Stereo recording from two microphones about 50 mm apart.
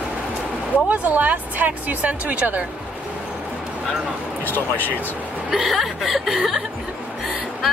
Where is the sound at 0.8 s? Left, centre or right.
Right.